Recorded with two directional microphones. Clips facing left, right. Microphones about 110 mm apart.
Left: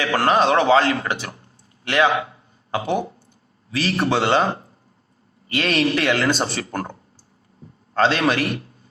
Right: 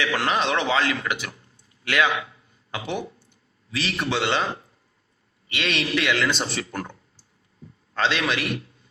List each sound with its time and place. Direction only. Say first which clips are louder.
0.0 s a man's voice: left 6 dB; 40° left (ahead or behind)
7.9 s speech: left 6 dB; 40° left (ahead or behind)